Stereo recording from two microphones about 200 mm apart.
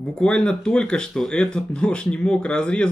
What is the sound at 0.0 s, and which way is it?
Speech, 5° left (ahead or behind).